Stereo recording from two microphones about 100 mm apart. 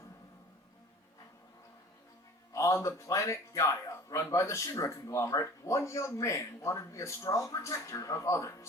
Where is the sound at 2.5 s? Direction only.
30° left (ahead or behind).